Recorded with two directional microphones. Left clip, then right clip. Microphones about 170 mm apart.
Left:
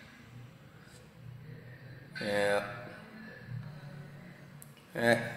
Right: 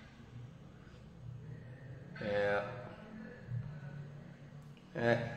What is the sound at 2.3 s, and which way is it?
Speech, 35° left (ahead or behind).